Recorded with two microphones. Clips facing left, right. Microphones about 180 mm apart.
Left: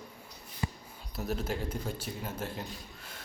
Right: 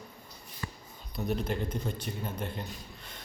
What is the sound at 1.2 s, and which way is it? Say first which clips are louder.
A man's voice: right 2 dB; 5° left (ahead or behind).